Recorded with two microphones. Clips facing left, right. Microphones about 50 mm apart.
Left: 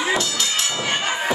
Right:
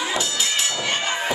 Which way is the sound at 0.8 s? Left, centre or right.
Centre.